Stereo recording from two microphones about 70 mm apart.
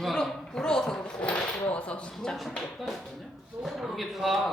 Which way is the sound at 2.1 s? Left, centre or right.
Centre.